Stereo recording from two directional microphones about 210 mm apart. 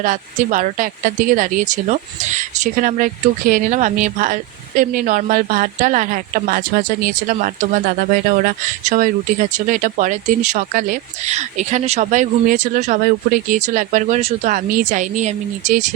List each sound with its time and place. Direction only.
0.0 s a woman's voice: 40° right (ahead or behind)